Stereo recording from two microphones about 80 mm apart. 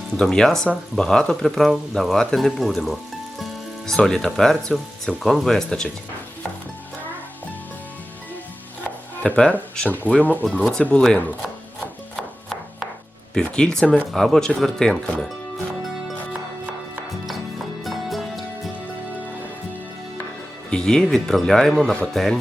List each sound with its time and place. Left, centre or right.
0.2 s speech: centre
9.2 s speech: centre
10.6 s speech: centre
12.1 s chopping: centre
13.3 s speech: centre
17.8 s music: centre
20.7 s speech: centre